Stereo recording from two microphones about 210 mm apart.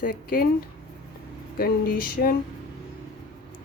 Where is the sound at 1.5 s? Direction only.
45° left (ahead or behind).